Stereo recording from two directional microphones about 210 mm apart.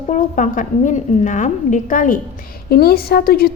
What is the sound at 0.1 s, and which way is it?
A woman's voice, 35° left (ahead or behind).